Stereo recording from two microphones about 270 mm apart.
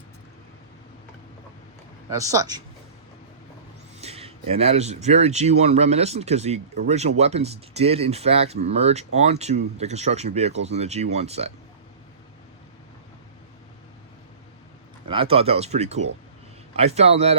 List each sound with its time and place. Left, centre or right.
2.0 s speech: centre
4.0 s speech: right
15.0 s speech: centre